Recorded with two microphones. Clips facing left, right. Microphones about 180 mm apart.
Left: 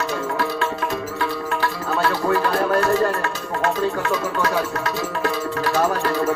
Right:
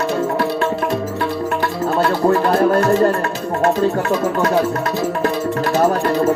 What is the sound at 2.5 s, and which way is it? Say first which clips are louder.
Music: right 5 dB; 35° right (ahead or behind).